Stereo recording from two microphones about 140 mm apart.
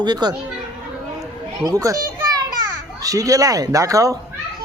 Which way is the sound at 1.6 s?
25° right (ahead or behind).